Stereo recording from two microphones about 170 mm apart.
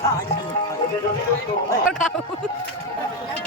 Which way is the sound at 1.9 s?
5° left (ahead or behind).